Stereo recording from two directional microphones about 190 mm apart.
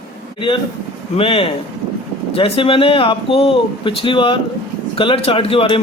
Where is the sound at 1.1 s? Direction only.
30° left (ahead or behind).